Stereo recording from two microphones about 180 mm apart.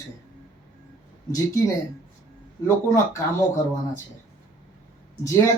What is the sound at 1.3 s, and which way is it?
Speech, 20° left (ahead or behind).